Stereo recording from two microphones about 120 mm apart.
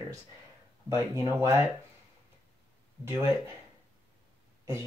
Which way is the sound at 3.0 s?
20° right (ahead or behind).